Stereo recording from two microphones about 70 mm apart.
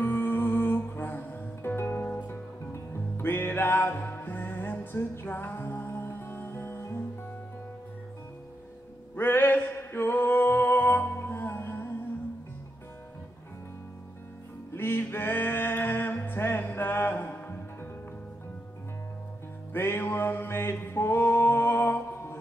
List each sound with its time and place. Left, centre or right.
0.0 s music: left
9.1 s music: left
14.7 s music: left
19.7 s music: left